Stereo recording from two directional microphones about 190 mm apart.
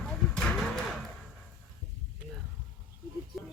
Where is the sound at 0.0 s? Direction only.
5° left (ahead or behind).